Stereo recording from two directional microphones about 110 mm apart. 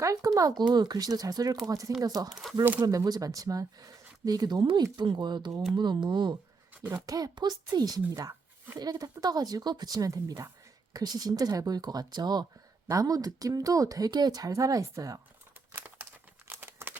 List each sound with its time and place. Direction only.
0.0 s speech: 30° right (ahead or behind)
2.3 s speech: centre (ahead or behind)
2.8 s speech: 35° right (ahead or behind)
15.7 s crumpling: 20° right (ahead or behind)